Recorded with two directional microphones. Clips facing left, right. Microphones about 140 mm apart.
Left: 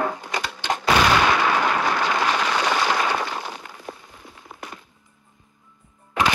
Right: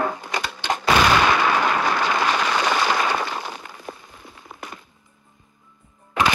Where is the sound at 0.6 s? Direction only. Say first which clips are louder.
Right 1 dB; 90° right.